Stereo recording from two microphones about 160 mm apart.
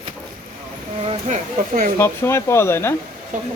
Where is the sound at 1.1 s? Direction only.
45° right (ahead or behind).